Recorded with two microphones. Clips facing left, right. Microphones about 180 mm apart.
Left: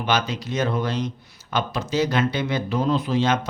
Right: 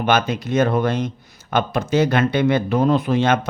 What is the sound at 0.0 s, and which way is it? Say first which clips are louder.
A man's voice: right 5 dB; 55° right (ahead or behind).